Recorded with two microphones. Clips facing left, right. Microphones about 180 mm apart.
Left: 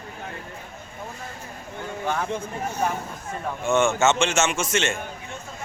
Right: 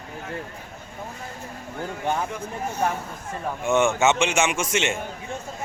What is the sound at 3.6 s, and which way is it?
A man's voice, 15° right (ahead or behind).